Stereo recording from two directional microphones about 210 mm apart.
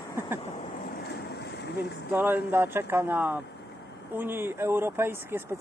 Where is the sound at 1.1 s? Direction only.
50° left (ahead or behind).